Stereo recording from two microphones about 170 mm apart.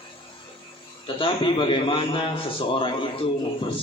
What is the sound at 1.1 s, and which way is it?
A man's voice, 30° left (ahead or behind).